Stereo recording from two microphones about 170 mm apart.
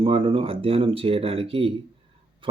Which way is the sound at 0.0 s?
35° right (ahead or behind).